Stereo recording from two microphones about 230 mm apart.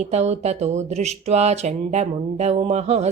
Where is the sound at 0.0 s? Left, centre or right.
Right.